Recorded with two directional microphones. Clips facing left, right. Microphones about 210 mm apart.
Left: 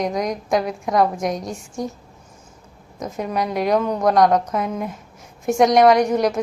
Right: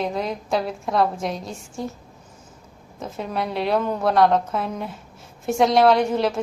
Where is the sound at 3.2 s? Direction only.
10° left (ahead or behind).